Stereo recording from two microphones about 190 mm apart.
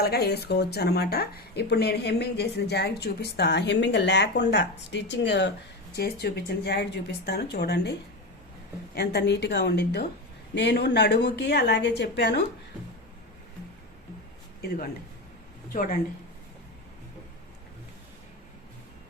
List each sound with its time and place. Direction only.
0.0 s speech: 55° left (ahead or behind)
9.0 s speech: 60° left (ahead or behind)
15.7 s speech: 45° left (ahead or behind)